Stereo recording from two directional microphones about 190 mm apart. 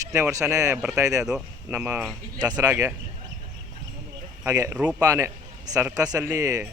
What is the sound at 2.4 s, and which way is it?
Speech, 20° right (ahead or behind).